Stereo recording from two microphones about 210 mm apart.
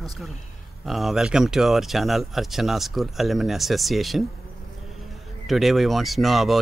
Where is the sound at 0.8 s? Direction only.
Centre (ahead or behind).